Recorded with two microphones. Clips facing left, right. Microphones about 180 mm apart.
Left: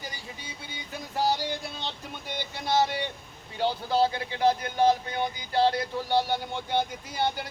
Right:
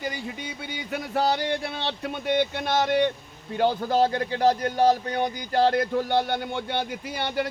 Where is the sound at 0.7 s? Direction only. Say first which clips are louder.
Right 9 dB; 65° right (ahead or behind).